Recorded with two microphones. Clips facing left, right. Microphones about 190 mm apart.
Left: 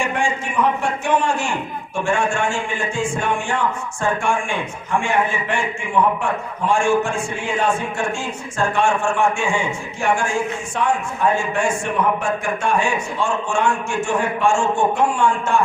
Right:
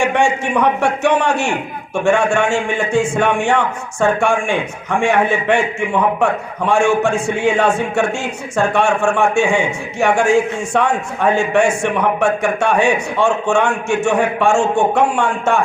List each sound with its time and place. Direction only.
0.0 s a man's voice: 75° right (ahead or behind)
6.7 s a man's voice: 70° right (ahead or behind)